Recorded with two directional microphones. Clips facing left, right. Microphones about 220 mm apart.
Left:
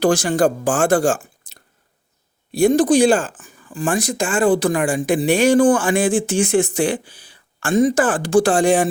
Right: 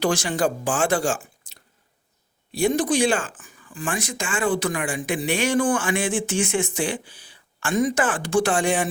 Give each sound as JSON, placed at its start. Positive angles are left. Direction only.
{"t": 0.0, "sound": "speech", "side_deg": 50}
{"t": 2.5, "sound": "a man's voice", "side_deg": 55}
{"t": 2.7, "sound": "speech", "side_deg": 35}